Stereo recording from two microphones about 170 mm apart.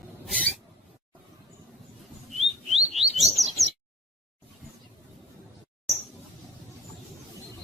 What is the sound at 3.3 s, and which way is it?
Chirp, centre (ahead or behind).